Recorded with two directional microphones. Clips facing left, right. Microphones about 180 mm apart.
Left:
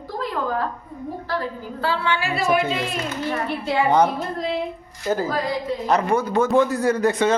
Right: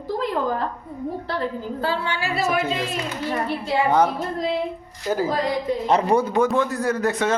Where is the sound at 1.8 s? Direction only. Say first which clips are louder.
Left 3 dB; 45° right (ahead or behind).